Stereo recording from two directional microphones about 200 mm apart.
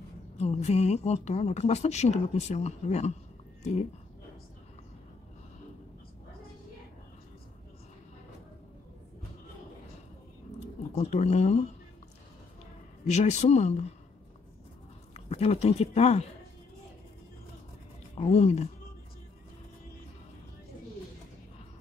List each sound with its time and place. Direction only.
0.4 s speech: 35° left (ahead or behind)
11.0 s speech: 35° left (ahead or behind)
13.1 s speech: 35° left (ahead or behind)
15.1 s speech: 30° left (ahead or behind)
18.1 s speech: 30° left (ahead or behind)